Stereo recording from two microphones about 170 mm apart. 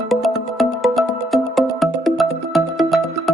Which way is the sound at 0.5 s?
Centre (ahead or behind).